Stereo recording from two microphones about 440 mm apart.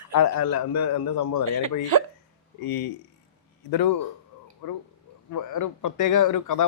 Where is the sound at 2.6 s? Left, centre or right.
Left.